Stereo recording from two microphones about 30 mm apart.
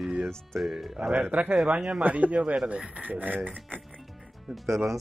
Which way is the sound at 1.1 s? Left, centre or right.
Right.